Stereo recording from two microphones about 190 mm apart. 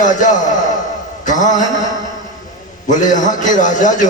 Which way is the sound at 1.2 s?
40° left (ahead or behind).